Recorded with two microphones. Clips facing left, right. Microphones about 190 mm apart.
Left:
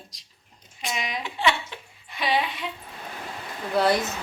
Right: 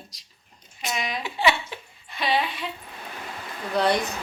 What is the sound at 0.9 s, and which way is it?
Speech, 20° left (ahead or behind).